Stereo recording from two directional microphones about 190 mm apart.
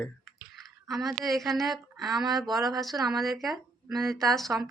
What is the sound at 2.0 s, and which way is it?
Speech, 20° right (ahead or behind).